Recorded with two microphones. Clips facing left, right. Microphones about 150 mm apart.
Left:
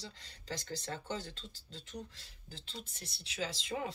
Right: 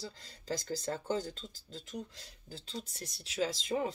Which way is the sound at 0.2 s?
40° right (ahead or behind).